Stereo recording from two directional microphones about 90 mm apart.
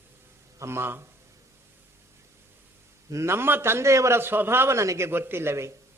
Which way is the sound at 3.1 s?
30° right (ahead or behind).